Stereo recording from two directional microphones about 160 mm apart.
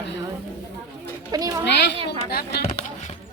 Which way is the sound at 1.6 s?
90° left.